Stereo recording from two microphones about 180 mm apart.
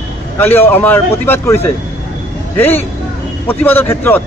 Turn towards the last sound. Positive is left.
turn(degrees=10)  # may be behind; listen again after turning